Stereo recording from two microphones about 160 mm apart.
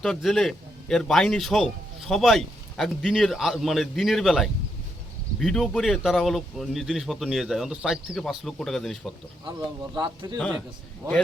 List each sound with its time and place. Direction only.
0.0 s a man's voice: centre (ahead or behind)
9.5 s speech: 30° right (ahead or behind)